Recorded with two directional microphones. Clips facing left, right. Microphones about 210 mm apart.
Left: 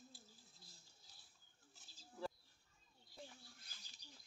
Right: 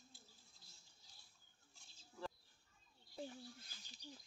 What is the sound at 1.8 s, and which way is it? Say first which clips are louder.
Bird: right 2 dB; 5° left (ahead or behind).